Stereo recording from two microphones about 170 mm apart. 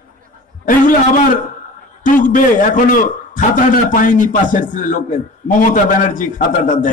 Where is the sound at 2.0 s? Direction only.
50° left (ahead or behind).